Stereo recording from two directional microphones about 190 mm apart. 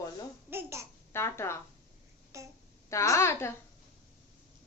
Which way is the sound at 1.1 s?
15° left (ahead or behind).